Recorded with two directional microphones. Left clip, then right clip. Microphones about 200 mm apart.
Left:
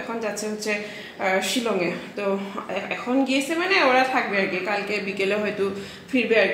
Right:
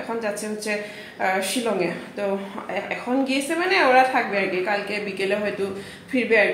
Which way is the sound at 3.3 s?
10° left (ahead or behind).